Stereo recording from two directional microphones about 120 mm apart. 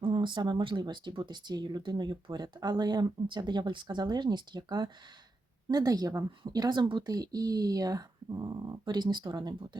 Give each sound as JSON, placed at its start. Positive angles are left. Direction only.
{"t": 0.0, "sound": "speech", "side_deg": -40}